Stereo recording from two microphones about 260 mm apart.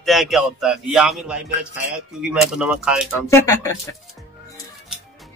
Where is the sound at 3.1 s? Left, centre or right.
Centre.